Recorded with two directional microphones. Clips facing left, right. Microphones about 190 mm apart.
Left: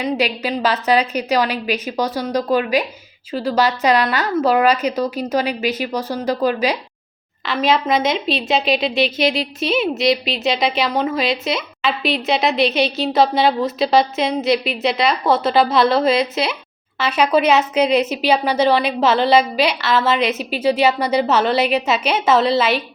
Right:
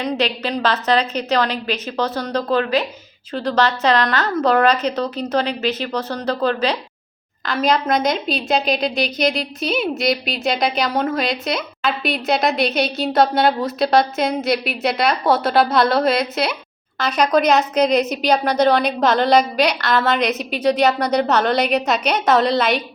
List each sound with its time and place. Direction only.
0.0 s a woman's voice: 10° left (ahead or behind)